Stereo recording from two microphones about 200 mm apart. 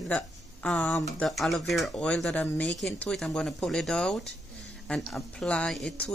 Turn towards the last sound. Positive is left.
turn(degrees=5)  # may be behind; listen again after turning